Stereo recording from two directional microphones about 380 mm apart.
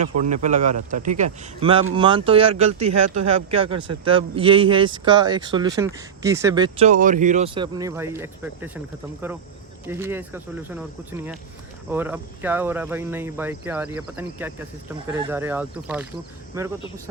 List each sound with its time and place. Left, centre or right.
0.0 s speech: centre
9.8 s speech: centre
11.9 s speech: centre